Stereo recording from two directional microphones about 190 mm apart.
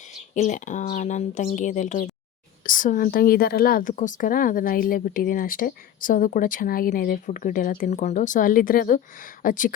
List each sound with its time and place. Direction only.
0.3 s speech: 40° left (ahead or behind)